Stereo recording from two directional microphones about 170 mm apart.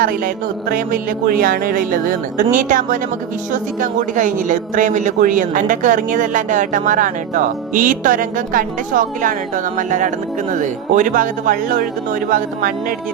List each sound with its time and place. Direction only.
0.7 s a man's voice: 60° right (ahead or behind)